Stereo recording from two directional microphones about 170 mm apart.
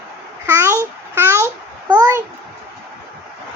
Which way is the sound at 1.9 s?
15° right (ahead or behind).